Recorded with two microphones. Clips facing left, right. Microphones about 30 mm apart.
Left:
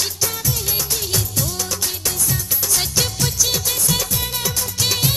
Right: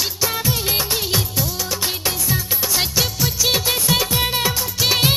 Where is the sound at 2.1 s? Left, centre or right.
Right.